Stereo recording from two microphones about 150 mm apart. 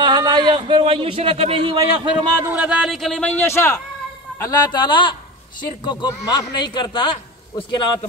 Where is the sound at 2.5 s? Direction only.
10° right (ahead or behind); by 7.8 s 30° left (ahead or behind).